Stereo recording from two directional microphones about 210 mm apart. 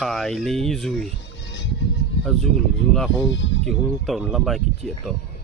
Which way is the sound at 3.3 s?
60° left (ahead or behind).